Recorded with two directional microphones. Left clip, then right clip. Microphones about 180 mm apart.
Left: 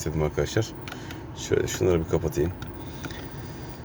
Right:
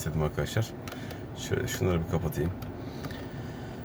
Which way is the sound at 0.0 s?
5° left (ahead or behind).